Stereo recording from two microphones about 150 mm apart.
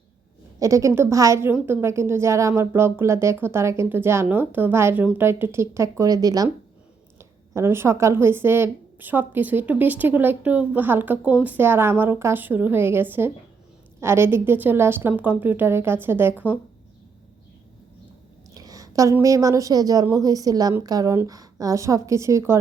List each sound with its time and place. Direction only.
0.6 s a woman's voice: 20° right (ahead or behind)
18.5 s a woman's voice: 25° right (ahead or behind)